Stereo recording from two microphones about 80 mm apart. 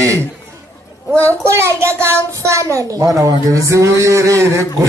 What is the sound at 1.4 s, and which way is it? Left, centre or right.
A woman's voice, right.